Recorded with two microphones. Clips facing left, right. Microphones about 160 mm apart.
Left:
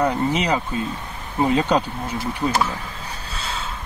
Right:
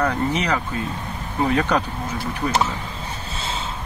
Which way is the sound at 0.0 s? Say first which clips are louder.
Left 1 dB; 15° left (ahead or behind).